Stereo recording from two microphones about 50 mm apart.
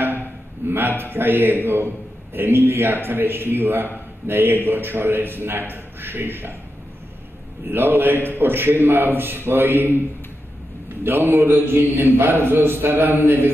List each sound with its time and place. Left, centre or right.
0.7 s a man's voice: right
7.7 s a man's voice: right
11.1 s a man's voice: right